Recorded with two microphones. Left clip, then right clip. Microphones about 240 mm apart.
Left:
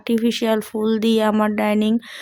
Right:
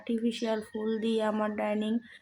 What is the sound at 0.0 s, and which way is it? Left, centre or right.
Speech, left.